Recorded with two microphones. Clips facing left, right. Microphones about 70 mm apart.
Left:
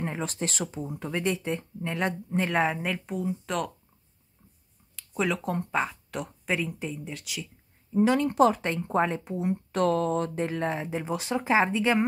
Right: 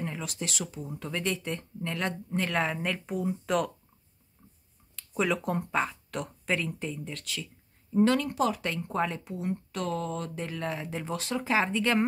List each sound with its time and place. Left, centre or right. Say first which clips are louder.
0.0 s speech: left 4 dB; left
0.8 s speech: left 3 dB; left; by 3.7 s centre
4.9 s speech: even; centre
8.2 s speech: left 6 dB; left
9.7 s speech: left 12 dB; left
10.4 s speech: left 5 dB; left